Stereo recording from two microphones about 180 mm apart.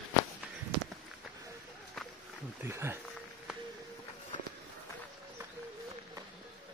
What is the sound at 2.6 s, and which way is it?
Speech, 15° right (ahead or behind).